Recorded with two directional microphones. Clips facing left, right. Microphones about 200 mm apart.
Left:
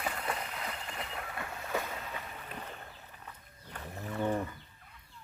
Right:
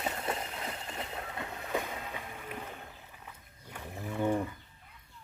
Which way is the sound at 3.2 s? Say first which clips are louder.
Left 1 dB; 10° right (ahead or behind).